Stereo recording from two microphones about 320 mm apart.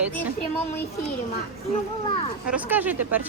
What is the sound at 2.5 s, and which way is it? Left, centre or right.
Speech, centre.